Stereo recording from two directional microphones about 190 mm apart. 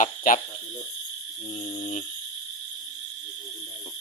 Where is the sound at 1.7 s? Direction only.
40° left (ahead or behind).